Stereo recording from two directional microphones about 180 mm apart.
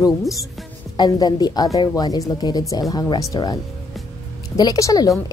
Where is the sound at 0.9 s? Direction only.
20° left (ahead or behind).